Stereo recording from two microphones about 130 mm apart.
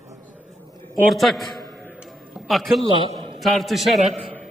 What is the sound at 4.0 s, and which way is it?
Speech, 60° right (ahead or behind).